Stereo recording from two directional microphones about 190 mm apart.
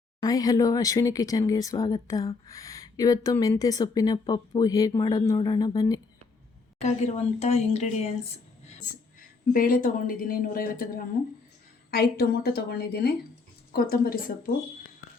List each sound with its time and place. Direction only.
0.2 s speech: 20° left (ahead or behind)
7.3 s a woman's voice: 35° left (ahead or behind)
9.5 s speech: 50° left (ahead or behind)